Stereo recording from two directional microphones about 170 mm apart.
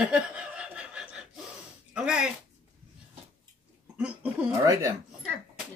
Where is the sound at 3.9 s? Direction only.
5° right (ahead or behind).